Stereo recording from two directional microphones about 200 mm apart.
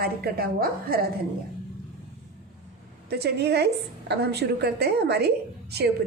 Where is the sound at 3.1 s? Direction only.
55° right (ahead or behind).